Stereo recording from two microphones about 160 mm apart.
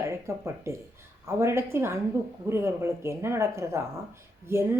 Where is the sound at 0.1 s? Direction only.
15° right (ahead or behind).